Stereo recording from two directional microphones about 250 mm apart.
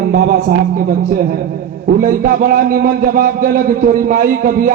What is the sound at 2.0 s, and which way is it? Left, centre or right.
Speech, right.